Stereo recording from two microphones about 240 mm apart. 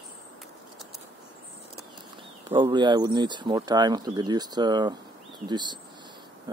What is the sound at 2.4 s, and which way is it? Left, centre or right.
Speech, centre.